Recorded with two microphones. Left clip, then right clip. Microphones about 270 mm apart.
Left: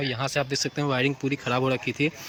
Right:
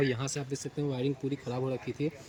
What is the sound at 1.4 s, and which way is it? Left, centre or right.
Speech, left.